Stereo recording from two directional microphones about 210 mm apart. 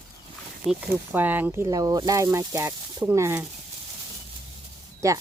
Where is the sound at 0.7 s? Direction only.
10° right (ahead or behind).